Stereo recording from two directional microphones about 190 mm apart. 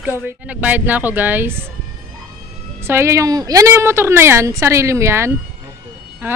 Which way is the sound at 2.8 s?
15° right (ahead or behind).